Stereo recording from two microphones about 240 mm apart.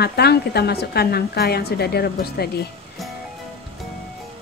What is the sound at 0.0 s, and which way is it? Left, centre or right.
Speech, left.